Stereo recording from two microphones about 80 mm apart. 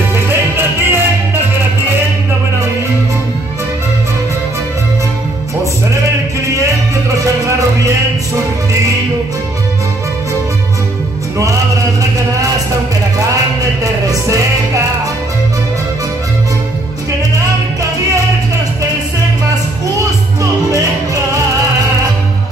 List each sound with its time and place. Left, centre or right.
0.1 s music: right
6.5 s music: right